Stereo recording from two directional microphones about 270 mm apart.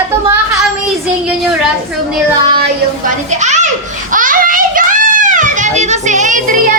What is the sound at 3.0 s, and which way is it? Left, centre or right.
Speech, right.